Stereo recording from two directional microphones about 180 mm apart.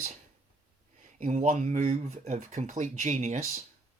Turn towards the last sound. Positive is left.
turn(degrees=-45)  # may be behind; listen again after turning